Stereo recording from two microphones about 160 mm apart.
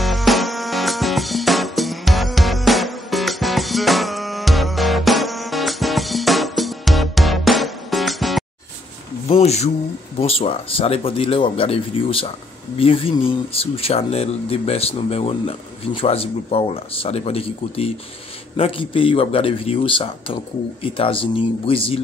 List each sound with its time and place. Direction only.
0.0 s music: centre (ahead or behind)
9.3 s a sound: 40° left (ahead or behind)
10.2 s speech: 35° left (ahead or behind)